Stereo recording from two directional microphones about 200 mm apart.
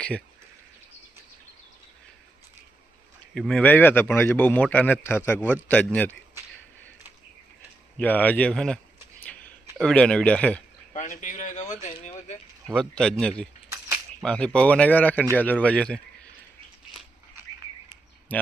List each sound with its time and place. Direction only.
3.3 s speech: 5° left (ahead or behind)
7.9 s speech: 10° left (ahead or behind)
9.2 s a sound: 5° left (ahead or behind)
10.9 s speech: 40° left (ahead or behind)
12.6 s speech: 5° left (ahead or behind)
18.3 s speech: 10° left (ahead or behind)